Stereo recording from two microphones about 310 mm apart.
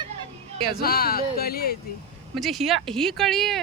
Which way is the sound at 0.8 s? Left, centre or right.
Left.